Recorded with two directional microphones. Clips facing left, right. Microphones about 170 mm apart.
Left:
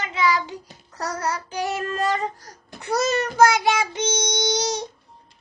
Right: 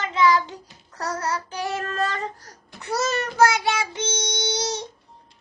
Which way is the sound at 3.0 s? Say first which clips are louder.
Left 2 dB; 15° left (ahead or behind).